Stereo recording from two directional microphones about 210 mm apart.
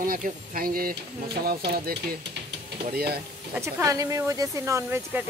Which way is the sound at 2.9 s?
50° right (ahead or behind).